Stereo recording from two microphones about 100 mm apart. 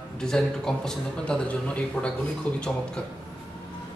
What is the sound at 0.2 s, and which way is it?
A man's voice, 5° left (ahead or behind).